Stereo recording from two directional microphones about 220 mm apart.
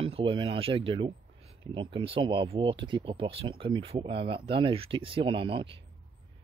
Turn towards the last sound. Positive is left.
turn(degrees=-25)  # may be behind; listen again after turning